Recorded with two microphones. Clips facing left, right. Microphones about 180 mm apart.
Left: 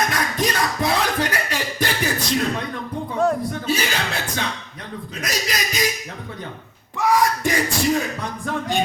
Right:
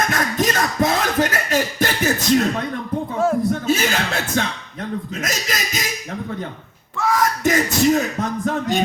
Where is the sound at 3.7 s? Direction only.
45° right (ahead or behind).